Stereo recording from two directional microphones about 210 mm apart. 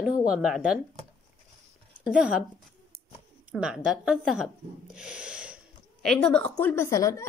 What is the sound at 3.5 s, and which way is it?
A woman's voice, 5° right (ahead or behind).